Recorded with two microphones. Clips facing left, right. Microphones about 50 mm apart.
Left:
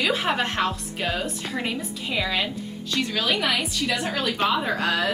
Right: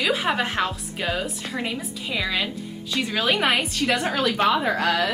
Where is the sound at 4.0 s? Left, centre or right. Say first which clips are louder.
Right 2 dB; right.